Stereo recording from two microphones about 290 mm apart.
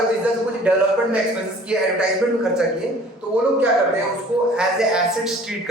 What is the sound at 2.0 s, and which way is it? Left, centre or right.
A woman's voice, centre.